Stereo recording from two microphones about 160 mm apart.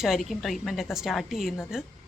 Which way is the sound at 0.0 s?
Centre (ahead or behind).